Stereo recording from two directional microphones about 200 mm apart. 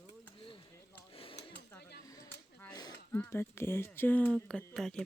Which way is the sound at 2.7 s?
20° left (ahead or behind).